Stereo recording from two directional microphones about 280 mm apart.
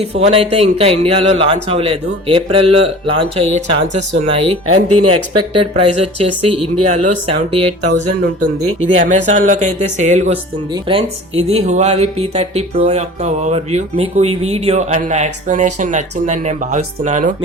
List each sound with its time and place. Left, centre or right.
0.0 s a man's voice: right
4.6 s speech: right
5.1 s a man's voice: centre